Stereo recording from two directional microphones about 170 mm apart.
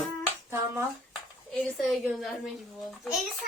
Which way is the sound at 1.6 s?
5° left (ahead or behind).